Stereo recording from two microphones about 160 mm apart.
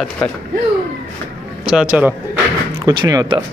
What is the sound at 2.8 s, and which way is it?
Speech, 25° right (ahead or behind).